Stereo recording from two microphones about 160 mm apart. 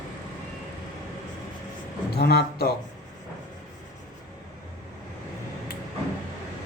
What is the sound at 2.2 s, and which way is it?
Speech, 85° left.